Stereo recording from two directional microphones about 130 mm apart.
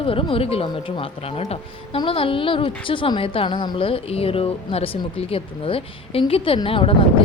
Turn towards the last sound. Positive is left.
turn(degrees=45)  # may be behind; listen again after turning